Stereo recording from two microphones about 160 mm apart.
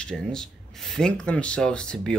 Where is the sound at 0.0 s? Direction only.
5° left (ahead or behind).